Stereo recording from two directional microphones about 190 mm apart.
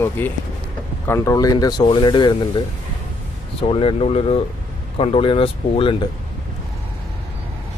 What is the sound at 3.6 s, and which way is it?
Speech, 30° left (ahead or behind).